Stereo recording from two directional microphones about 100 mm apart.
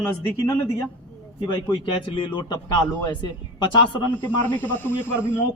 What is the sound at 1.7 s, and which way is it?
A man's voice, 55° left (ahead or behind).